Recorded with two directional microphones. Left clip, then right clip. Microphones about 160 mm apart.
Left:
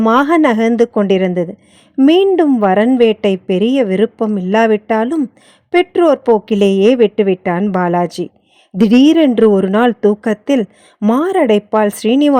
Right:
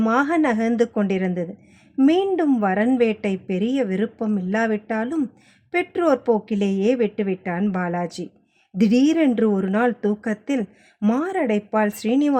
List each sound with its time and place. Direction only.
0.0 s a woman's voice: 50° left (ahead or behind)
2.6 s a woman's voice: 45° left (ahead or behind)